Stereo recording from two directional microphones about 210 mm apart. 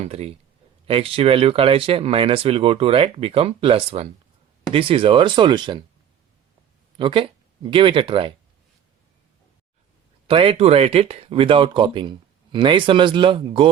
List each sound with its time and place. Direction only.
0.0 s speech: 30° right (ahead or behind)
6.9 s speech: 25° right (ahead or behind)
10.2 s speech: 25° right (ahead or behind)